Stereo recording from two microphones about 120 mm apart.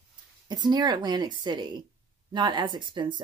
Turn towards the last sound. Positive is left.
turn(degrees=-40)  # may be behind; listen again after turning